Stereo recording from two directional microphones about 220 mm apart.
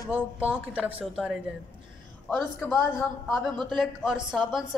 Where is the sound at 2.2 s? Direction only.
5° left (ahead or behind).